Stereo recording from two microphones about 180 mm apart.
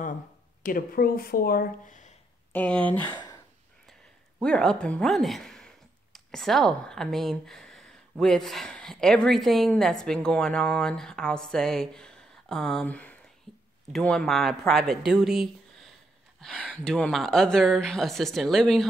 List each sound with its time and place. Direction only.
0.7 s speech: 50° left (ahead or behind)
2.5 s speech: 10° left (ahead or behind)
4.4 s speech: 5° left (ahead or behind)